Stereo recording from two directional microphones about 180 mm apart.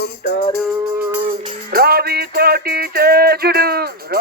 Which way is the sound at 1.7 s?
60° right (ahead or behind).